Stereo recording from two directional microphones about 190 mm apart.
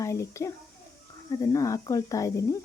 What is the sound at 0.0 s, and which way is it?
A child's voice, 15° left (ahead or behind).